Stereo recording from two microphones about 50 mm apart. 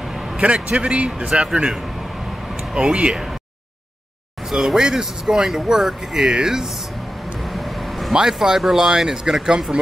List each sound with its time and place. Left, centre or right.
0.4 s a man's voice: right
4.5 s speech: centre
7.4 s vehicle: centre
8.1 s speech: centre